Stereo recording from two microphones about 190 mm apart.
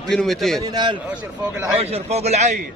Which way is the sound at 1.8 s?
35° right (ahead or behind).